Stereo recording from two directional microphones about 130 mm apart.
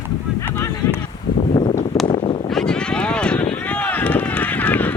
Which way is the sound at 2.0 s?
40° left (ahead or behind).